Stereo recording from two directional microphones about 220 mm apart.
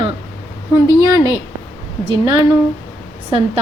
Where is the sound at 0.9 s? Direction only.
15° right (ahead or behind).